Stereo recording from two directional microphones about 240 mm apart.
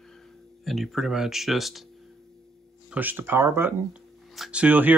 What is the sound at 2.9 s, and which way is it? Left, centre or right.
Speech, centre.